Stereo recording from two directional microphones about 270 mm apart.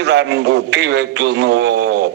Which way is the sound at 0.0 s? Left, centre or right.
Right.